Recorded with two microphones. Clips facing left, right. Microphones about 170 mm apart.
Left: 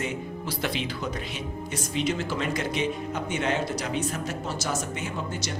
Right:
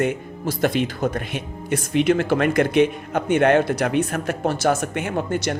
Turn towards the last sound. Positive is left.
turn(degrees=-60)  # may be behind; listen again after turning